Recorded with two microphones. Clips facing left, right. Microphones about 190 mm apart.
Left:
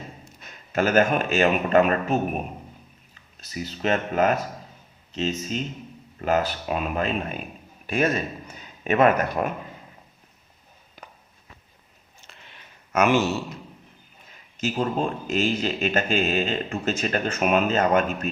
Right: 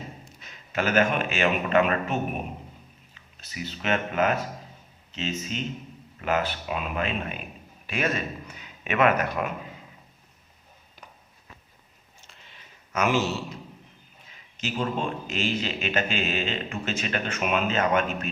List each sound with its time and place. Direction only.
0.3 s a man's voice: 45° left (ahead or behind)
5.4 s a man's voice: 40° left (ahead or behind)
12.3 s a sound: 60° left (ahead or behind)
14.6 s a man's voice: 40° left (ahead or behind)